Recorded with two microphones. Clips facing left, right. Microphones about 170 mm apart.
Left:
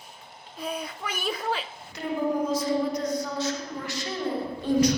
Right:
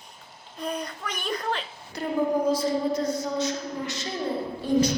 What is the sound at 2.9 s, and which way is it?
A woman's voice, 25° right (ahead or behind).